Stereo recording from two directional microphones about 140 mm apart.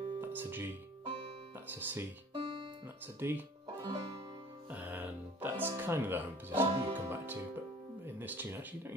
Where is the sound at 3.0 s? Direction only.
15° right (ahead or behind).